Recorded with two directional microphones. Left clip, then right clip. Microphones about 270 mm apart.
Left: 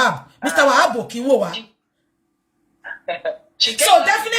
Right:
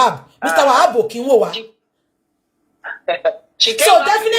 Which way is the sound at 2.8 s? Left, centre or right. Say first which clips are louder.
Right 7 dB; right.